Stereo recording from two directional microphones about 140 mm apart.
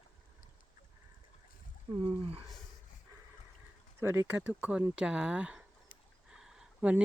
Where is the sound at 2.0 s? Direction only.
40° right (ahead or behind).